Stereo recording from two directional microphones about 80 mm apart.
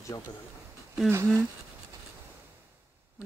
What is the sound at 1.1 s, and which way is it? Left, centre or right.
Speech, right.